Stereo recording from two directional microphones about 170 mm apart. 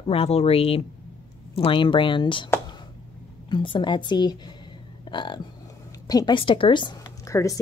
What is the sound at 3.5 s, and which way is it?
A woman's voice, 30° left (ahead or behind).